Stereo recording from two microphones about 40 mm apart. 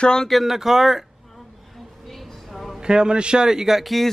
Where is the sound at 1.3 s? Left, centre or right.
Centre.